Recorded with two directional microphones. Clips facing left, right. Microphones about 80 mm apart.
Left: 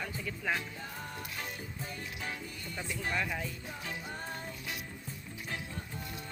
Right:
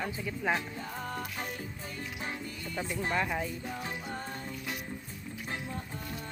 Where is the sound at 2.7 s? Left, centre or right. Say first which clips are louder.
Right 4 dB; right.